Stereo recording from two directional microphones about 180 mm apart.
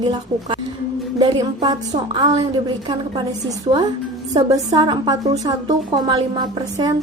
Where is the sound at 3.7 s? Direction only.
30° right (ahead or behind).